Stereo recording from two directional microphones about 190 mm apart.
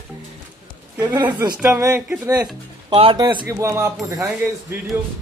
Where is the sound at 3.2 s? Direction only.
15° right (ahead or behind).